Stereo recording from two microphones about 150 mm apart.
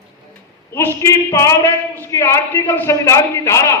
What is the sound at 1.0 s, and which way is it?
A man's voice, 20° left (ahead or behind).